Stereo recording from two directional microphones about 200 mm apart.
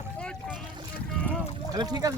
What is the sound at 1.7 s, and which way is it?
Speech, 20° right (ahead or behind).